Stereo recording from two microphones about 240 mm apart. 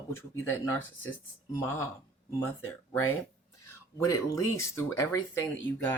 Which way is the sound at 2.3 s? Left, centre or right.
Centre.